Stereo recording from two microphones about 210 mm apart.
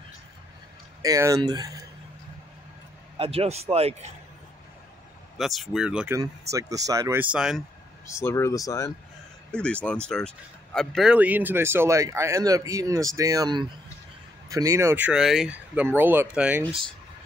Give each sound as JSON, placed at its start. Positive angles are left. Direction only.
{"t": 1.0, "sound": "speech", "side_deg": -15}
{"t": 3.2, "sound": "a man's voice", "side_deg": -30}
{"t": 5.4, "sound": "speech", "side_deg": 0}
{"t": 6.1, "sound": "speech", "side_deg": -15}
{"t": 8.1, "sound": "speech", "side_deg": 15}
{"t": 9.5, "sound": "speech", "side_deg": 5}